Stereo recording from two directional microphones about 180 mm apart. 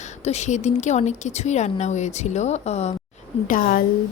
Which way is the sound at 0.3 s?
40° left (ahead or behind).